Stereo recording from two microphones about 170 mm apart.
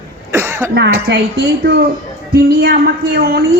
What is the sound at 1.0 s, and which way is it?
Speech, 75° right (ahead or behind).